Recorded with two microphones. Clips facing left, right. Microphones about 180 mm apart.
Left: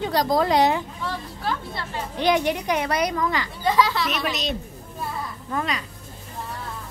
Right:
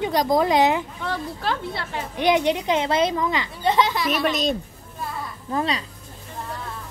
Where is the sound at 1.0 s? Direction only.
65° right (ahead or behind).